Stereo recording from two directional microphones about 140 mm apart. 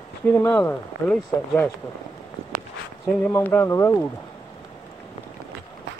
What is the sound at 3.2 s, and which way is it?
Speech, 15° left (ahead or behind).